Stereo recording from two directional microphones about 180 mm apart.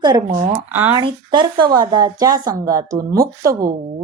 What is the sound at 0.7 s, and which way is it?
Speech, 10° right (ahead or behind).